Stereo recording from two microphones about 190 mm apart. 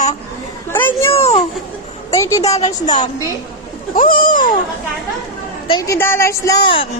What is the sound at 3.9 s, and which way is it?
Speech, 45° left (ahead or behind).